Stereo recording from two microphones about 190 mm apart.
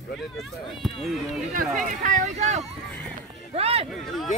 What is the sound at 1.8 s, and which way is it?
Speech, 40° right (ahead or behind).